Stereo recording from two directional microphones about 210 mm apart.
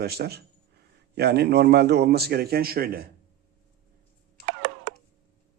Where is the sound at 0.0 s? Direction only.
50° right (ahead or behind).